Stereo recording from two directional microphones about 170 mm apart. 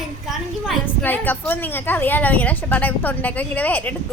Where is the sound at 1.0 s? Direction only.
10° left (ahead or behind).